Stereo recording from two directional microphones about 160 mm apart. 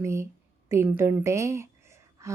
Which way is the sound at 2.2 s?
20° right (ahead or behind).